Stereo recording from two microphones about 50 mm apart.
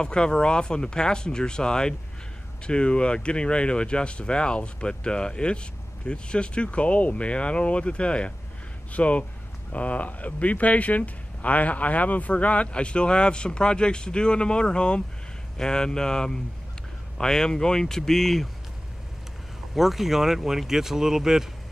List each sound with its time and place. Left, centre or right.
0.0 s speech: centre
19.7 s speech: centre